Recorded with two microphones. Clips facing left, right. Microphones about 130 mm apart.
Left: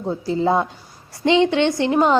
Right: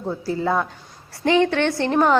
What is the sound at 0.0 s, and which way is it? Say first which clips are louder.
A woman's voice: left 3 dB; 20° left (ahead or behind).